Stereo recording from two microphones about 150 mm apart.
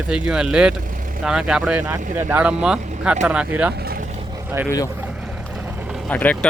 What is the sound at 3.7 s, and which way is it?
Vehicle, 85° right.